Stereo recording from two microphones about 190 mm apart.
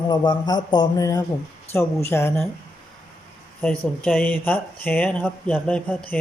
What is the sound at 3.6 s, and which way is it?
Speech, 5° left (ahead or behind).